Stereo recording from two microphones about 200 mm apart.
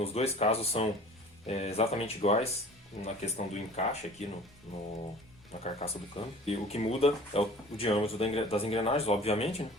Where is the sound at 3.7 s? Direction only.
35° left (ahead or behind).